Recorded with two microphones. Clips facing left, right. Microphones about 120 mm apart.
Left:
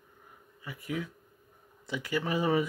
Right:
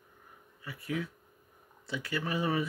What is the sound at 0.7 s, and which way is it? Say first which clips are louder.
Speech: even; 20° left (ahead or behind).